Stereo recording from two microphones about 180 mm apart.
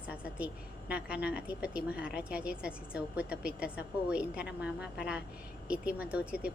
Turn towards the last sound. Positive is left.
turn(degrees=-5)  # may be behind; listen again after turning